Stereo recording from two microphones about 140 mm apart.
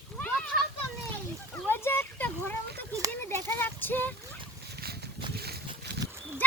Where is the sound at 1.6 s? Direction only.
15° left (ahead or behind).